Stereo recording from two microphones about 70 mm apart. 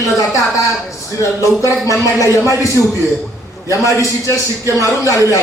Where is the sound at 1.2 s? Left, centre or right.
Left.